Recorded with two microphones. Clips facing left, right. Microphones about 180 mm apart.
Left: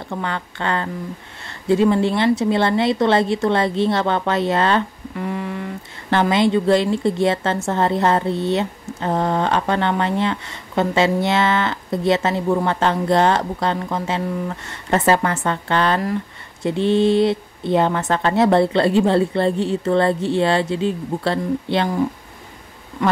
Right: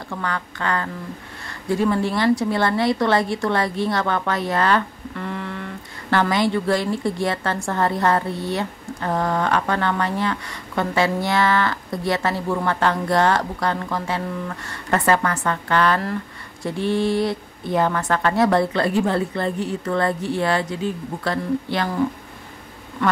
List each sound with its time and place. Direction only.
0.1 s speech: 25° left (ahead or behind)
5.1 s a woman's voice: 10° left (ahead or behind)